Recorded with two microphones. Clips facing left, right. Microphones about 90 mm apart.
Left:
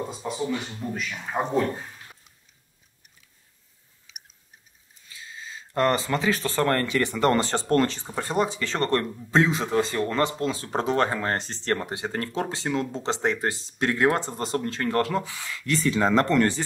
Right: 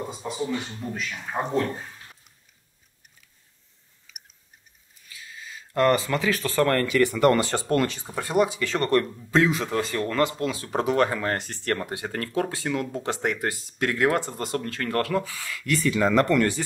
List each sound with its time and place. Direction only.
0.1 s speech: centre (ahead or behind)
5.0 s speech: 25° left (ahead or behind)